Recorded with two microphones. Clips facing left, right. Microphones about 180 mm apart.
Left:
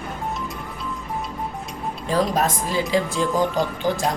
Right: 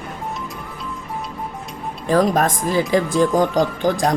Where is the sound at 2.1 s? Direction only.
50° right (ahead or behind).